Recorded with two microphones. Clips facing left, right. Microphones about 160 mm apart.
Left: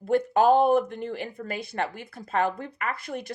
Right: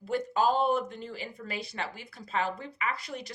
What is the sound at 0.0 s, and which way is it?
Speech, 55° left (ahead or behind).